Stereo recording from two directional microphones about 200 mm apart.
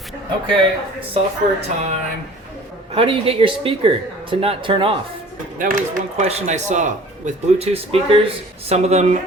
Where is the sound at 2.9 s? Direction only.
30° right (ahead or behind).